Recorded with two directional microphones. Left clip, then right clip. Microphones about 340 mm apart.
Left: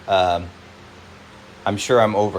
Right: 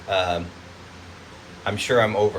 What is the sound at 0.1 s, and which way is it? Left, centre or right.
Speech, centre.